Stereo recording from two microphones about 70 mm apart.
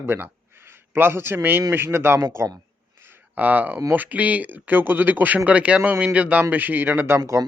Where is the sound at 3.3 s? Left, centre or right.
Right.